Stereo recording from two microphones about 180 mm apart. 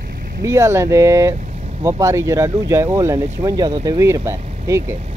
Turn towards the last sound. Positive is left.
turn(degrees=-15)  # may be behind; listen again after turning